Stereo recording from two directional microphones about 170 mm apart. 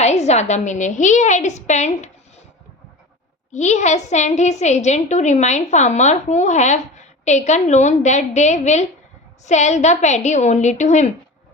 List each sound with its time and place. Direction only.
0.0 s a woman's voice: 40° left (ahead or behind)
3.5 s a woman's voice: 45° left (ahead or behind)